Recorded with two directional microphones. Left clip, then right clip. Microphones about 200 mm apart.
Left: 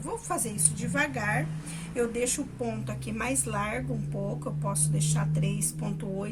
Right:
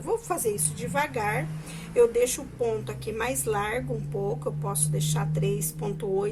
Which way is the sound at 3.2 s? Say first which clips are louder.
Right 3 dB; 25° right (ahead or behind).